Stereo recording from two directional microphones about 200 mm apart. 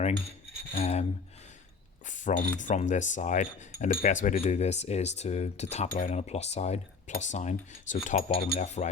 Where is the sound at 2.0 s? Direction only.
40° left (ahead or behind).